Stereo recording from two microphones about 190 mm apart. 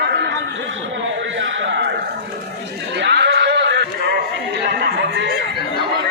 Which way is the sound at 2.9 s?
65° right (ahead or behind).